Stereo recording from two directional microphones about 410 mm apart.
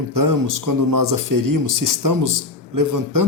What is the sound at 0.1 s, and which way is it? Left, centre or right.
Speech, right.